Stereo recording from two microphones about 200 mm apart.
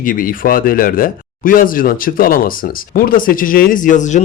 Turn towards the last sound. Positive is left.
turn(degrees=40)  # may be behind; listen again after turning